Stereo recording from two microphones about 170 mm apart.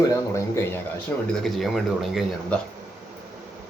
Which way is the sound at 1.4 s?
Centre (ahead or behind).